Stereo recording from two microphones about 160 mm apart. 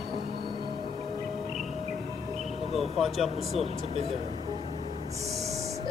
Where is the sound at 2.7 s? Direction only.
Centre (ahead or behind).